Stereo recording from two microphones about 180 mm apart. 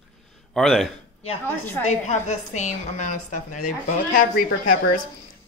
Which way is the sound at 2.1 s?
40° left (ahead or behind).